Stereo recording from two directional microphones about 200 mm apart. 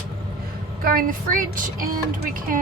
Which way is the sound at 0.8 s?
45° right (ahead or behind).